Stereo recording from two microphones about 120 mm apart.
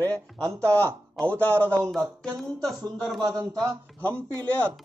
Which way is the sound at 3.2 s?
30° right (ahead or behind).